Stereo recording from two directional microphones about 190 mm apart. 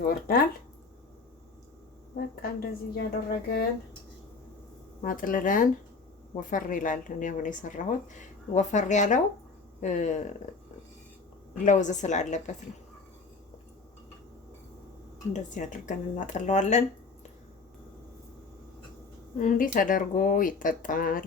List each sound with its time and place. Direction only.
0.0 s speech: 50° left (ahead or behind)
2.1 s speech: 55° left (ahead or behind)
5.0 s speech: 45° left (ahead or behind)
11.6 s speech: 40° left (ahead or behind)
15.3 s speech: 40° left (ahead or behind)
19.4 s speech: 45° left (ahead or behind)